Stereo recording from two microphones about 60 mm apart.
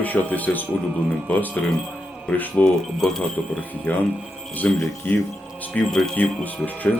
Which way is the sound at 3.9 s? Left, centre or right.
Left.